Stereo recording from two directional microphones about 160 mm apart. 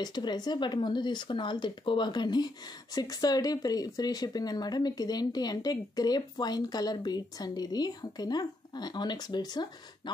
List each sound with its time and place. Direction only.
0.0 s speech: 25° left (ahead or behind)